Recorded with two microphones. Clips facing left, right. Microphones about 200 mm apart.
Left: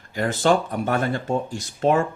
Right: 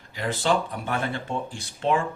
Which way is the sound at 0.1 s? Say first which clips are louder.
Left 5 dB; 45° left (ahead or behind).